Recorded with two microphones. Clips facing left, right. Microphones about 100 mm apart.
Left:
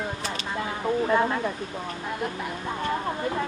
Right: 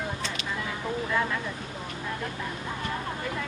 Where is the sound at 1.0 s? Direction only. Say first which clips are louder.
Left 5 dB; 35° left (ahead or behind).